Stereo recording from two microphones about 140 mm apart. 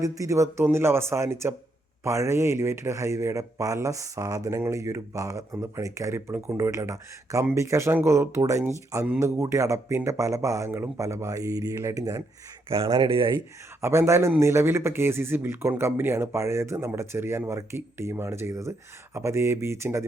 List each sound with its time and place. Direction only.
0.0 s speech: 25° right (ahead or behind)
12.7 s speech: 40° right (ahead or behind)
13.8 s speech: 20° right (ahead or behind)